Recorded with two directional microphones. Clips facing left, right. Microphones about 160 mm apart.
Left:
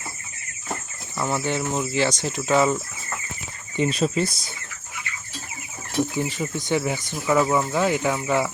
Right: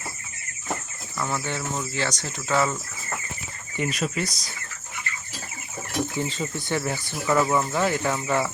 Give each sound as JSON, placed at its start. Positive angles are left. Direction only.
{"t": 1.2, "sound": "speech", "side_deg": 20}
{"t": 3.8, "sound": "speech", "side_deg": 30}
{"t": 6.1, "sound": "speech", "side_deg": 15}